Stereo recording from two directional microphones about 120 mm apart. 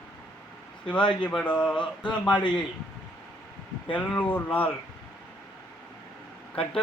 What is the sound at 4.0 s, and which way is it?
Speech, 15° left (ahead or behind).